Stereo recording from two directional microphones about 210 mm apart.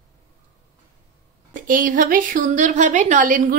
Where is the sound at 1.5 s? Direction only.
40° right (ahead or behind).